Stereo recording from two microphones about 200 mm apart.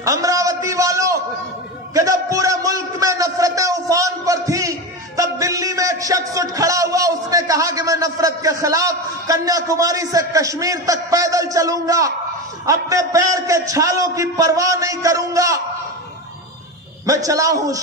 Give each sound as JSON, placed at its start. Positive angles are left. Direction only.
{"t": 0.0, "sound": "a man's voice", "side_deg": -15}
{"t": 17.0, "sound": "a man's voice", "side_deg": -15}